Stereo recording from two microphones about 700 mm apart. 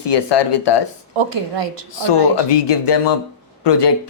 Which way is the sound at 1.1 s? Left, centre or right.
Right.